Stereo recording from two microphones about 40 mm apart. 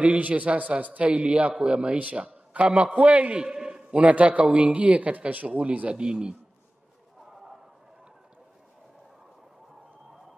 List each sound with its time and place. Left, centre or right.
0.0 s a man's voice: right
3.4 s a sound: centre
3.9 s a man's voice: right
5.5 s a man's voice: right